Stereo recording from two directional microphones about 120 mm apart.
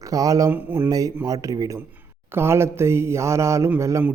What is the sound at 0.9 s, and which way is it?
Speech, 30° right (ahead or behind).